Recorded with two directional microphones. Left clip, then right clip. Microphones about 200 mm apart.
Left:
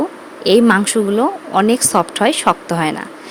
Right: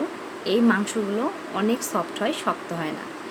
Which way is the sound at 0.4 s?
50° left (ahead or behind).